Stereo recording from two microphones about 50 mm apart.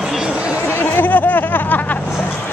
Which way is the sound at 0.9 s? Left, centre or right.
Left.